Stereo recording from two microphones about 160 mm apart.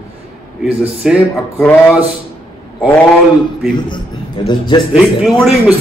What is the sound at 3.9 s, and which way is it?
Speech, 30° left (ahead or behind).